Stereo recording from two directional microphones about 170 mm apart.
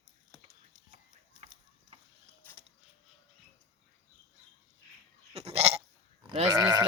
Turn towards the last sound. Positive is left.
turn(degrees=-20)  # may be behind; listen again after turning